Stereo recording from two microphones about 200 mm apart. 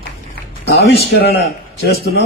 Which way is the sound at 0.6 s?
55° left (ahead or behind).